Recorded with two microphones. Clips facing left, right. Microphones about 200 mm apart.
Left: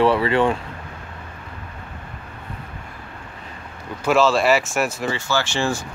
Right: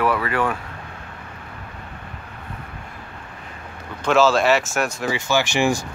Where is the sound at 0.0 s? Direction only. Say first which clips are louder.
Left 4 dB; 25° left (ahead or behind).